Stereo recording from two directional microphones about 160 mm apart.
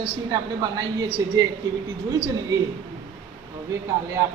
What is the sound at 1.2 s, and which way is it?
Speech, 20° right (ahead or behind).